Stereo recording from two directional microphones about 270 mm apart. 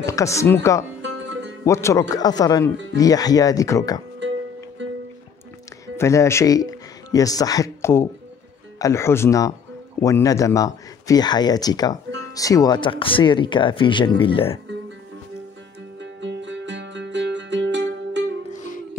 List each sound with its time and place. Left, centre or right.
0.0 s speech: centre
1.0 s music: right
1.7 s speech: centre
4.8 s music: right
5.9 s speech: centre
16.0 s music: right
18.5 s music: left